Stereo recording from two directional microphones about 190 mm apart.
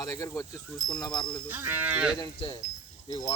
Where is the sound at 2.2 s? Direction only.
25° left (ahead or behind).